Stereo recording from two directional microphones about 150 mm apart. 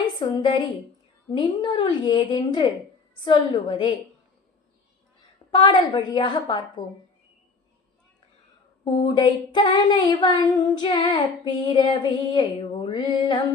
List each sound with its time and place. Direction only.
0.2 s a woman's voice: 30° left (ahead or behind)
5.5 s a woman's voice: 35° left (ahead or behind)
8.8 s a sound: 35° left (ahead or behind)